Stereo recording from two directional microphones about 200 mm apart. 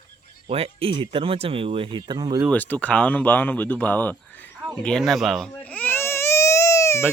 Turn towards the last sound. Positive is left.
turn(degrees=15)  # may be behind; listen again after turning